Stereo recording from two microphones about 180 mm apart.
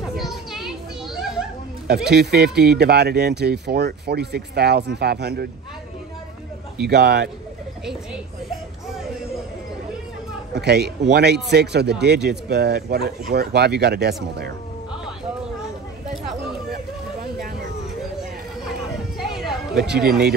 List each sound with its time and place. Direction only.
0.2 s children playing: centre (ahead or behind)
2.0 s speech: 65° right (ahead or behind)
6.8 s speech: 60° right (ahead or behind)
7.8 s speech: 5° right (ahead or behind)
10.5 s speech: 65° right (ahead or behind)
19.1 s music: centre (ahead or behind)
20.0 s speech: 60° right (ahead or behind)